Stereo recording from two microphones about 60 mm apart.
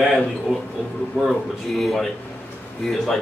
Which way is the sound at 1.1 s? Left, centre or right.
Centre.